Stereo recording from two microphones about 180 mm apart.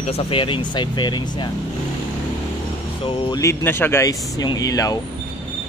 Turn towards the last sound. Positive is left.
turn(degrees=20)  # may be behind; listen again after turning